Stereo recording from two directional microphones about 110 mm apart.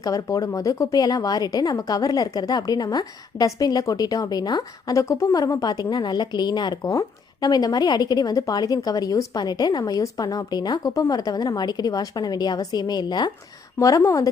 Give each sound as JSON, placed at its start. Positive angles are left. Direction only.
{"t": 0.0, "sound": "speech", "side_deg": 30}
{"t": 13.7, "sound": "speech", "side_deg": 30}